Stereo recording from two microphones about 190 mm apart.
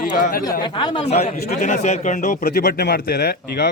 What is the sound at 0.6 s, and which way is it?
A man's voice, 25° left (ahead or behind).